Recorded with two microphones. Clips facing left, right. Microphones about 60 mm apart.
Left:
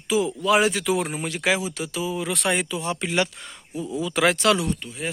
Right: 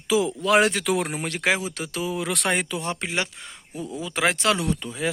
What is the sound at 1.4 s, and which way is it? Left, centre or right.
Speech, right.